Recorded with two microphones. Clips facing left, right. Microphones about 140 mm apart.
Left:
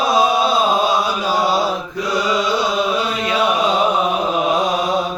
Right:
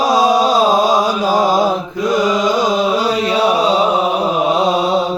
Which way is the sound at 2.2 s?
45° right (ahead or behind).